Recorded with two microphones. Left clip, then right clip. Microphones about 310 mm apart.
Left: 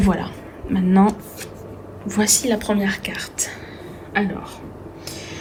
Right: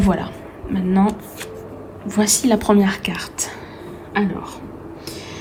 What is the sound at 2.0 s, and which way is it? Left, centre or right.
Speech, centre.